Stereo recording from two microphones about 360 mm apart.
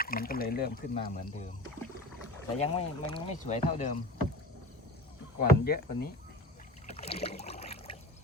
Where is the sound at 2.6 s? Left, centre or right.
Centre.